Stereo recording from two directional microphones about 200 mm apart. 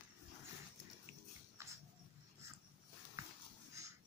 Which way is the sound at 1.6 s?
15° right (ahead or behind).